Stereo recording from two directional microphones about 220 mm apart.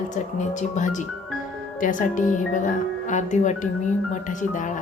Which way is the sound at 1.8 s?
35° left (ahead or behind).